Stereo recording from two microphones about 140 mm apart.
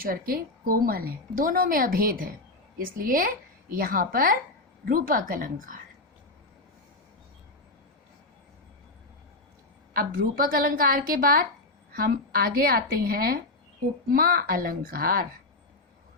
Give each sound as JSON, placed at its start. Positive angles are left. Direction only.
{"t": 0.0, "sound": "a woman's voice", "side_deg": -90}
{"t": 4.9, "sound": "a woman's voice", "side_deg": -80}
{"t": 9.9, "sound": "a woman's voice", "side_deg": -90}